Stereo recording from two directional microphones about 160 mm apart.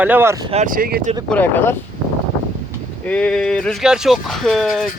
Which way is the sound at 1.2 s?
10° left (ahead or behind).